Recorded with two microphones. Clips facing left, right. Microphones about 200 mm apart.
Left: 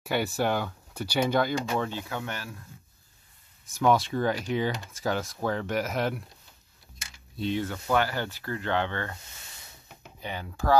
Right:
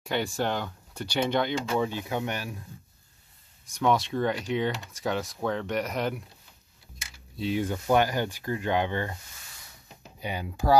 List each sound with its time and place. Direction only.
0.0 s speech: 5° left (ahead or behind)
1.8 s speech: 15° right (ahead or behind)
3.6 s speech: centre (ahead or behind)
7.3 s speech: 5° right (ahead or behind)
7.6 s speech: 20° right (ahead or behind)
10.2 s speech: 15° right (ahead or behind)